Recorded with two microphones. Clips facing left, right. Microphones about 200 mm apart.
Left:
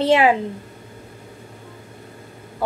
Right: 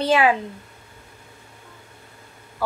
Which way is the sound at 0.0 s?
25° left (ahead or behind).